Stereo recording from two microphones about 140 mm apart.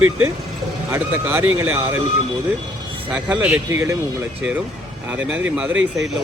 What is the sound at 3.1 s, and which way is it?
Speech, 10° right (ahead or behind).